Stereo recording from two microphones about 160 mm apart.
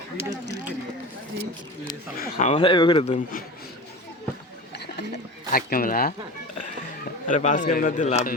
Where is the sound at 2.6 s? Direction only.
30° left (ahead or behind).